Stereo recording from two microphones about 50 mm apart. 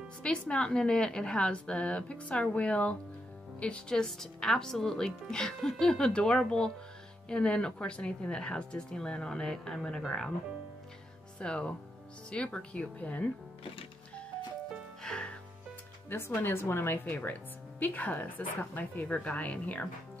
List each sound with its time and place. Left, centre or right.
0.2 s a woman's voice: centre
11.3 s a woman's voice: centre
15.0 s music: centre
16.1 s a woman's voice: left